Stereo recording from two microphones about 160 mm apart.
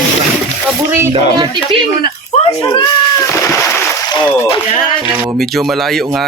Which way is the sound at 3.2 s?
20° left (ahead or behind).